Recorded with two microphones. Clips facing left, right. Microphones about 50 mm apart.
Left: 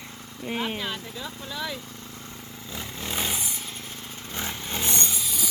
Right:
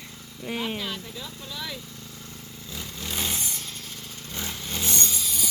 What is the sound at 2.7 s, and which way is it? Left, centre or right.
Vehicle, left.